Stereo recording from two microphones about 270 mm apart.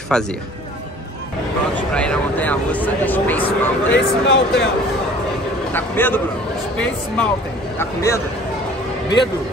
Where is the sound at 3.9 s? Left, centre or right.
Left.